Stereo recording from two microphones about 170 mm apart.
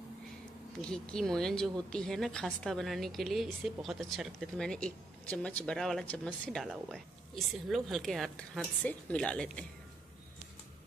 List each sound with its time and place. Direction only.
0.7 s a woman's voice: 5° left (ahead or behind)